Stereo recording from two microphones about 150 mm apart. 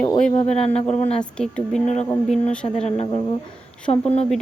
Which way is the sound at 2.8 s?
45° left (ahead or behind).